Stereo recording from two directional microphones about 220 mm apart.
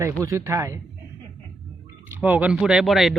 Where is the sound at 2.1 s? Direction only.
5° right (ahead or behind).